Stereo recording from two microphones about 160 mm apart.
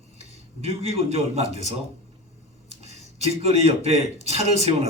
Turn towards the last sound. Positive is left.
turn(degrees=-40)  # may be behind; listen again after turning